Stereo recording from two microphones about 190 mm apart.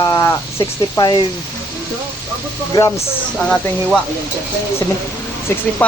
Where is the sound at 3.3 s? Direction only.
5° left (ahead or behind).